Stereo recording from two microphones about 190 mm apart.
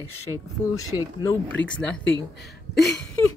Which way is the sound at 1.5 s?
5° left (ahead or behind).